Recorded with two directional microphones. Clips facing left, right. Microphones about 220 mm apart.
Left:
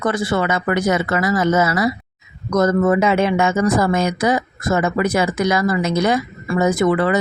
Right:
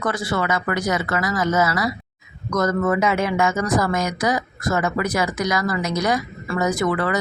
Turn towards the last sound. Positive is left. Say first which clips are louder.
# left 5 dB
turn(degrees=25)  # may be behind; listen again after turning